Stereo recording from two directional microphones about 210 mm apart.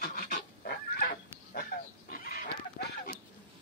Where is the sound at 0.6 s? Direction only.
45° left (ahead or behind).